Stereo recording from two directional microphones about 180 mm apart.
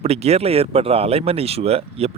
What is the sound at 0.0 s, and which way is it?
Speech, 35° right (ahead or behind).